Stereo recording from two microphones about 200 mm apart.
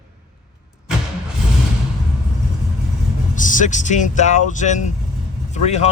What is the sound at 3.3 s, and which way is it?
Speech, 40° left (ahead or behind).